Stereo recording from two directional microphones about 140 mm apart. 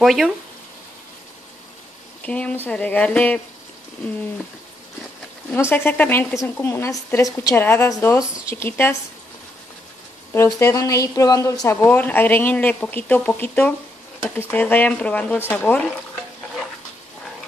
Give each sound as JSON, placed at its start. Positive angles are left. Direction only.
{"t": 0.0, "sound": "speech", "side_deg": 0}
{"t": 2.2, "sound": "a woman's voice", "side_deg": 10}
{"t": 5.5, "sound": "a woman's voice", "side_deg": 15}
{"t": 10.3, "sound": "a woman's voice", "side_deg": 20}